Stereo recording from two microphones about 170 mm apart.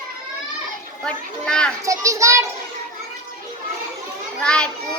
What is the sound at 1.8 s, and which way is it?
Speech, 20° right (ahead or behind).